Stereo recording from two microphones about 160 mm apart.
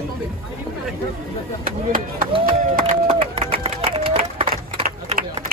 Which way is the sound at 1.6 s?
60° right (ahead or behind).